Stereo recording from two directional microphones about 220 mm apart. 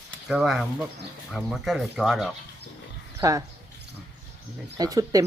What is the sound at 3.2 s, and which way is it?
Speech, 15° right (ahead or behind).